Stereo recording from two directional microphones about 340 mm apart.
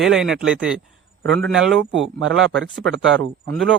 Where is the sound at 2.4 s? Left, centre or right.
Right.